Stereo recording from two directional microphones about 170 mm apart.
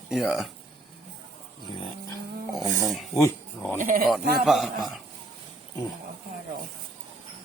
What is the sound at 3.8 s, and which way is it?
Speech, 50° right (ahead or behind).